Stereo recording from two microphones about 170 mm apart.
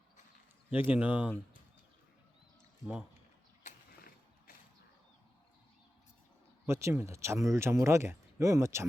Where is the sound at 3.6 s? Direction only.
55° left (ahead or behind).